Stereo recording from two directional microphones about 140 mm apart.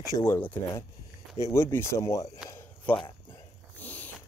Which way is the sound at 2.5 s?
15° left (ahead or behind).